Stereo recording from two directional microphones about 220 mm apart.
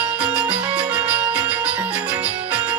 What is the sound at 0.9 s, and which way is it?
Music, 5° right (ahead or behind).